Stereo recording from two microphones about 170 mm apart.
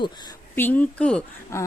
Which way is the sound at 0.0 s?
25° left (ahead or behind).